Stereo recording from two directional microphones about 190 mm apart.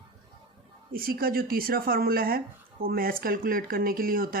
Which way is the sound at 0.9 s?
50° right (ahead or behind).